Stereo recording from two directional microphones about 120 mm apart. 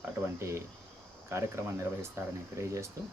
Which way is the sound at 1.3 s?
25° right (ahead or behind).